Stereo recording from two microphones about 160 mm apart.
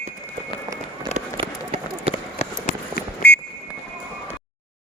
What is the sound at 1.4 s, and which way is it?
Run, 40° right (ahead or behind).